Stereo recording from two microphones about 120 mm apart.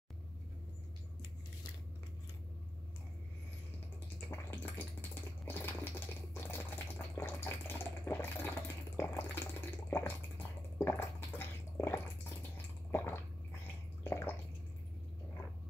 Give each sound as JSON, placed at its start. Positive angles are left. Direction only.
{"t": 4.3, "sound": "a sound", "side_deg": 20}
{"t": 5.4, "sound": "water", "side_deg": 15}
{"t": 12.9, "sound": "drip", "side_deg": 20}
{"t": 14.0, "sound": "bathtub", "side_deg": 20}